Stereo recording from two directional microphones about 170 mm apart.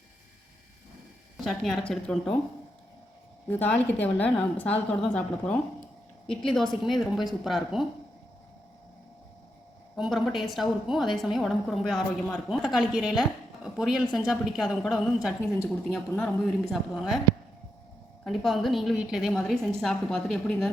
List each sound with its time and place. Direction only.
1.5 s a woman's voice: centre (ahead or behind)
3.5 s a woman's voice: 10° left (ahead or behind)
9.9 s a woman's voice: centre (ahead or behind)
14.0 s a woman's voice: 25° left (ahead or behind)
14.3 s a woman's voice: centre (ahead or behind)
18.3 s a woman's voice: centre (ahead or behind)